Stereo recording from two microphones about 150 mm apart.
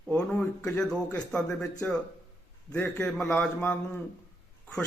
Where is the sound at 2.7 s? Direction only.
10° left (ahead or behind).